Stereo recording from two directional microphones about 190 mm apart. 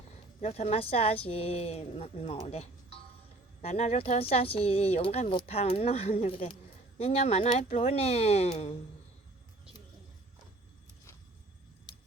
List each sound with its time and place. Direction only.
0.4 s speech: 35° left (ahead or behind)